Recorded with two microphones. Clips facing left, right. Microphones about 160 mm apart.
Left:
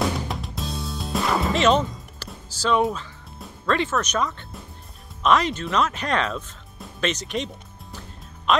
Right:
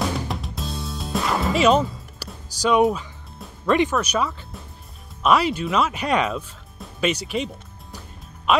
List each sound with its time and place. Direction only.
0.3 s music: centre (ahead or behind)
3.6 s speech: 15° right (ahead or behind)